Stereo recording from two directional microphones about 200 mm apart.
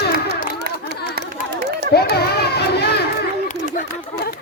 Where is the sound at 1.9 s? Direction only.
50° left (ahead or behind).